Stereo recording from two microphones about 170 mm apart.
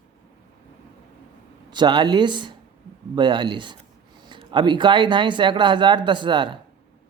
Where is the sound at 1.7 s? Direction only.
25° right (ahead or behind).